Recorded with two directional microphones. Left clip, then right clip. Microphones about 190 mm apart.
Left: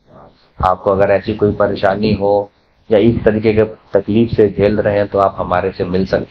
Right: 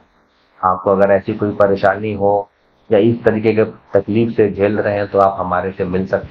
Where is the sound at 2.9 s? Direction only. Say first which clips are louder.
Left 1 dB; 60° left (ahead or behind).